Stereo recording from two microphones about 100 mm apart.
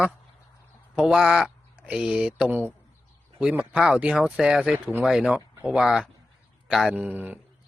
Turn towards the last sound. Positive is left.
turn(degrees=-20)  # may be behind; listen again after turning